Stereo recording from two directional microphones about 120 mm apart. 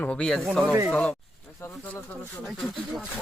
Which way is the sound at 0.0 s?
10° left (ahead or behind).